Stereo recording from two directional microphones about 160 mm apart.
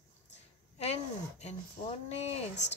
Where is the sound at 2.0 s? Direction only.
40° left (ahead or behind).